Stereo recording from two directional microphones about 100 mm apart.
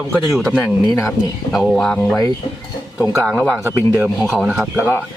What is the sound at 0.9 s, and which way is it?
Speech, 30° left (ahead or behind).